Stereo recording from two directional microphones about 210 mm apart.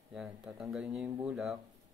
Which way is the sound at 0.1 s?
5° right (ahead or behind).